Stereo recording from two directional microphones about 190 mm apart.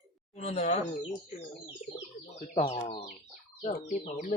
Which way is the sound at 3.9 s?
45° left (ahead or behind).